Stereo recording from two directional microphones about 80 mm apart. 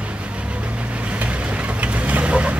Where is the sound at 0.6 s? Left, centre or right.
Centre.